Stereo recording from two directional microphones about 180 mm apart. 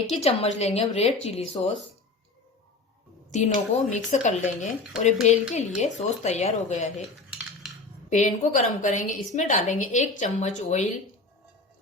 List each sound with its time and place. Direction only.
0.2 s speech: 35° left (ahead or behind)
3.2 s speech: 40° left (ahead or behind)
8.1 s a woman's voice: 45° left (ahead or behind)